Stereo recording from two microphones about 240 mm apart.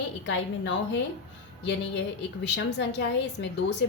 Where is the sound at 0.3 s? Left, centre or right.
Left.